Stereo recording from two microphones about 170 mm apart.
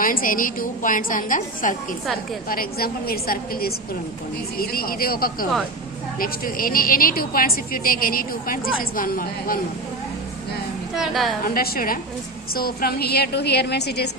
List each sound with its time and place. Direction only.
0.0 s a woman's voice: 55° left (ahead or behind)
2.5 s a woman's voice: 60° left (ahead or behind)
10.9 s a woman's voice: centre (ahead or behind)
11.4 s a woman's voice: 60° left (ahead or behind); by 14.1 s 75° left (ahead or behind)